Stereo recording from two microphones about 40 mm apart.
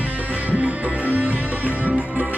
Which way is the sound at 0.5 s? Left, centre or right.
Right.